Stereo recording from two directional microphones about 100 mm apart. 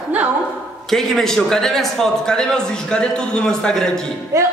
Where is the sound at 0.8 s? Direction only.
5° left (ahead or behind).